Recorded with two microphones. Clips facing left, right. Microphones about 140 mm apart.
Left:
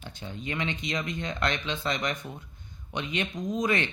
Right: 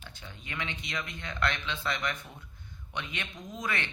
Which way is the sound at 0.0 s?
20° left (ahead or behind).